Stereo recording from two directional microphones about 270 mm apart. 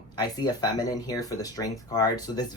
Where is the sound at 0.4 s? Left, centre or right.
Centre.